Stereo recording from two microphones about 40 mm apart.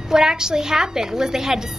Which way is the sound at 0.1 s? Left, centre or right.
Centre.